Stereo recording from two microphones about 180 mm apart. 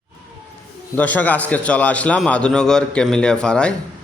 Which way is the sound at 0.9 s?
10° left (ahead or behind).